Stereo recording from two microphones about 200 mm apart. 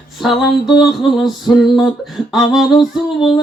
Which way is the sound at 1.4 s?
20° left (ahead or behind).